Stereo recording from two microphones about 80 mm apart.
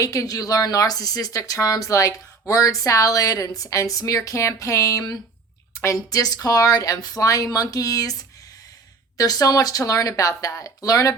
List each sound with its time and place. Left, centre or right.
0.0 s a woman's voice: left